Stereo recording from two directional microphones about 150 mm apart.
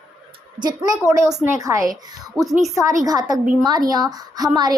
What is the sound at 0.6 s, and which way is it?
Speech, 25° right (ahead or behind).